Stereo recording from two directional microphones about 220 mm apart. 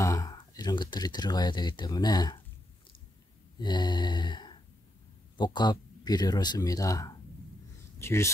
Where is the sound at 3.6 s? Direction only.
20° left (ahead or behind).